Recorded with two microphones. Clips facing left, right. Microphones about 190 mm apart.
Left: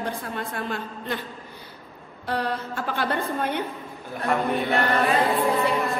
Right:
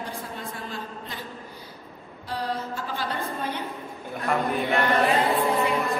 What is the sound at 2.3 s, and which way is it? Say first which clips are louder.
A woman's voice: left 3 dB; 65° left (ahead or behind).